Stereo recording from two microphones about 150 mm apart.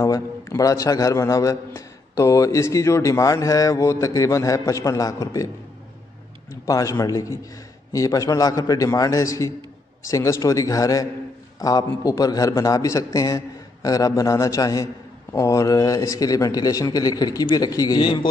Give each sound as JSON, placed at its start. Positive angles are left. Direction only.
{"t": 0.0, "sound": "a man's voice", "side_deg": 20}
{"t": 6.5, "sound": "a man's voice", "side_deg": 20}